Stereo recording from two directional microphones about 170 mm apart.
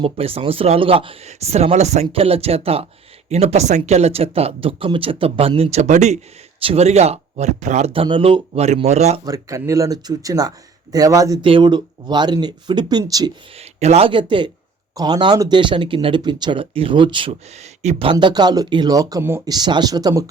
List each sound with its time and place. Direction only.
0.0 s speech: 35° right (ahead or behind)
8.0 s speech: 30° right (ahead or behind)
9.2 s speech: 20° right (ahead or behind)
13.6 s speech: 40° right (ahead or behind); by 20.2 s 20° right (ahead or behind)